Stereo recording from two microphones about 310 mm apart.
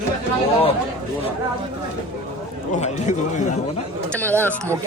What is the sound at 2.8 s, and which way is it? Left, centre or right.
Speech, left.